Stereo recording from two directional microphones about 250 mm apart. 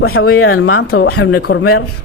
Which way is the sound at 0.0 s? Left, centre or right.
Left.